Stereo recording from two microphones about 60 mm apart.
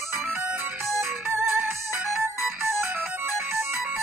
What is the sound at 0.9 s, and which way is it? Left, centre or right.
Music, right.